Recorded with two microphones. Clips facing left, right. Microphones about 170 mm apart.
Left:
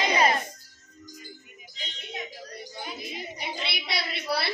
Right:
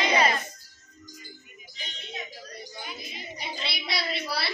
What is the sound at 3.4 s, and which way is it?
Child singing, 60° left (ahead or behind).